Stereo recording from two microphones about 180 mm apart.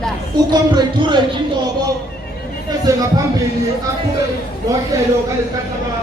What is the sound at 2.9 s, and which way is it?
Speech, 20° right (ahead or behind).